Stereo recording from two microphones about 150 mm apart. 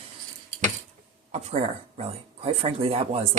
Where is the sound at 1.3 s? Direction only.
45° right (ahead or behind).